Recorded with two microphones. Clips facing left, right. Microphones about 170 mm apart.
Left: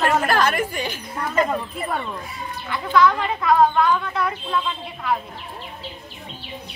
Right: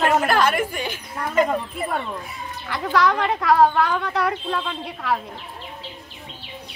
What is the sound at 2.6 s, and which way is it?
Speech, 75° right (ahead or behind).